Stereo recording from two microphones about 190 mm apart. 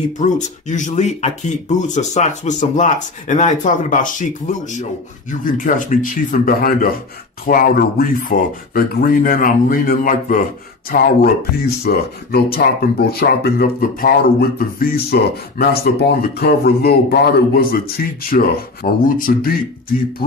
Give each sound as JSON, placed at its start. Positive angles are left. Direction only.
{"t": 0.2, "sound": "speech", "side_deg": 40}